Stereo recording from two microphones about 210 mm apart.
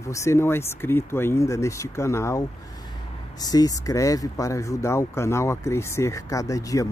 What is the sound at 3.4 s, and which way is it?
Speech, 15° left (ahead or behind).